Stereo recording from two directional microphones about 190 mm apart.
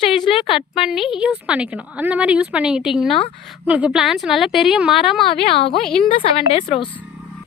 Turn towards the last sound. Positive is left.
turn(degrees=30)  # may be behind; listen again after turning